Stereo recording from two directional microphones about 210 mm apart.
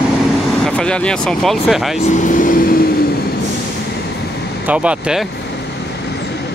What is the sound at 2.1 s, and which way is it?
Speech, 40° left (ahead or behind).